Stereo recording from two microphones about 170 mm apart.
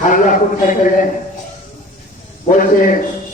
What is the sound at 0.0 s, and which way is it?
Speech, 50° left (ahead or behind).